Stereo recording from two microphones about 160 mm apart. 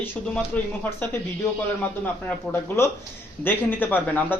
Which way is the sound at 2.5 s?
15° left (ahead or behind).